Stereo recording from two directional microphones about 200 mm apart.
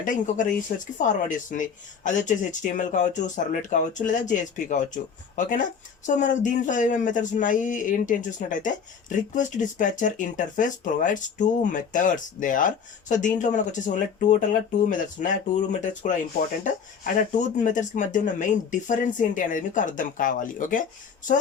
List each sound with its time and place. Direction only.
0.0 s speech: 40° left (ahead or behind)